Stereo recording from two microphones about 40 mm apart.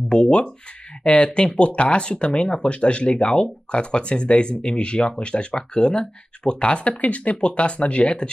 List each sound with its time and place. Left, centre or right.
0.1 s speech: left